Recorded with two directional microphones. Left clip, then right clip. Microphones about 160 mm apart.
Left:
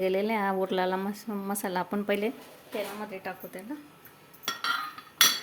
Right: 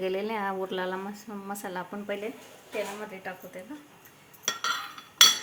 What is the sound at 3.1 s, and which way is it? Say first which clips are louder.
Speech: left 1 dB; 60° left (ahead or behind).